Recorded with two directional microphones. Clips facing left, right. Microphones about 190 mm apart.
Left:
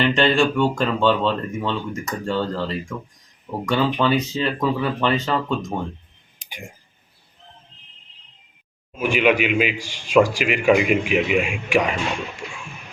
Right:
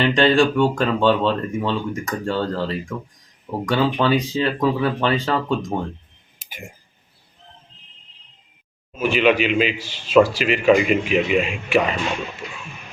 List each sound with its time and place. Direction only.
0.0 s speech: 15° right (ahead or behind)
3.7 s speech: 10° right (ahead or behind)
6.4 s clicking: 5° right (ahead or behind)
9.0 s a man's voice: 10° left (ahead or behind)